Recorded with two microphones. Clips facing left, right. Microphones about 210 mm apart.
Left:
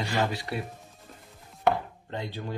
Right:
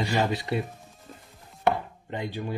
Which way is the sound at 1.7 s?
15° right (ahead or behind).